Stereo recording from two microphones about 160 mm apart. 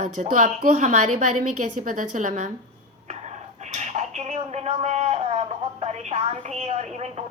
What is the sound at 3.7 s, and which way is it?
Speech, 45° right (ahead or behind).